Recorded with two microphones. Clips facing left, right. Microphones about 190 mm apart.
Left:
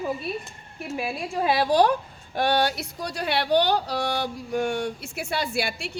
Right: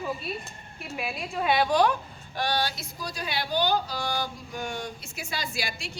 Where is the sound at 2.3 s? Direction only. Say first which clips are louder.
Left 6 dB; 55° left (ahead or behind).